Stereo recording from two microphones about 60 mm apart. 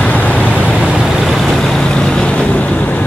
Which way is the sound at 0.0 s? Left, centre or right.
Left.